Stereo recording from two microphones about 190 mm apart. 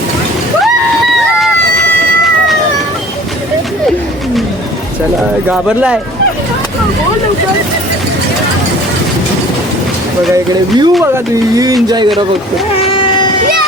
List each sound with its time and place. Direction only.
5.5 s speech: 5° right (ahead or behind)
10.3 s speech: 20° right (ahead or behind)